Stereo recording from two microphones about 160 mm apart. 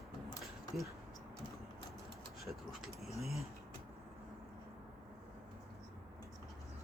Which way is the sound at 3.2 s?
Centre (ahead or behind).